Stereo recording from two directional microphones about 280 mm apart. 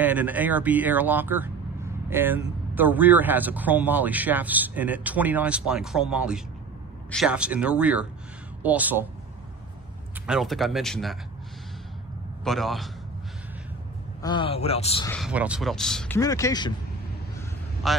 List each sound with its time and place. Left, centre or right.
0.0 s speech: centre
10.2 s speech: centre
12.4 s speech: centre
14.2 s a man's voice: centre
15.0 s speech: centre
17.8 s speech: centre